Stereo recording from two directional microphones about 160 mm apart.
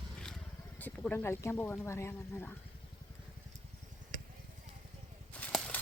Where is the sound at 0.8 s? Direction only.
10° left (ahead or behind).